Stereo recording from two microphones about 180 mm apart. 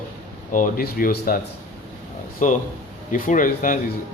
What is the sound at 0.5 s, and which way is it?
Speech, 50° left (ahead or behind).